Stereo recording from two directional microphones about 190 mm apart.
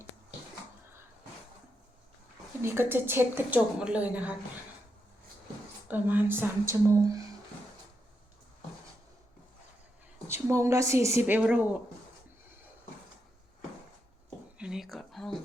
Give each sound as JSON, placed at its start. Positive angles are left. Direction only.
{"t": 2.6, "sound": "a woman's voice", "side_deg": -10}
{"t": 5.9, "sound": "a woman's voice", "side_deg": -10}
{"t": 10.2, "sound": "a woman's voice", "side_deg": -15}
{"t": 14.6, "sound": "a sound", "side_deg": 0}